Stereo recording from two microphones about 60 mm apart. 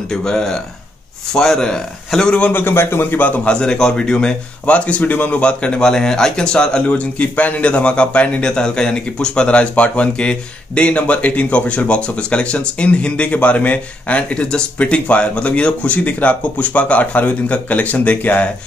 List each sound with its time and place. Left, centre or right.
0.1 s speech: centre
2.5 s a man's voice: left
3.4 s a man's voice: centre; by 18.5 s left